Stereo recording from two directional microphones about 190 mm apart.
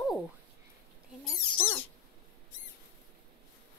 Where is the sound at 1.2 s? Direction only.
10° left (ahead or behind).